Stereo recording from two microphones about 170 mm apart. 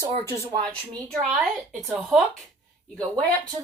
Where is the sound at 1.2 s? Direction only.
Centre (ahead or behind).